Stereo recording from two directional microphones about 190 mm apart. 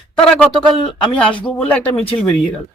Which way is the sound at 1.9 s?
30° left (ahead or behind).